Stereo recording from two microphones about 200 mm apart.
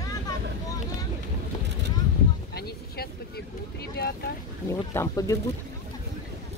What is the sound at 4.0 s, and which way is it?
Boat, 50° left (ahead or behind).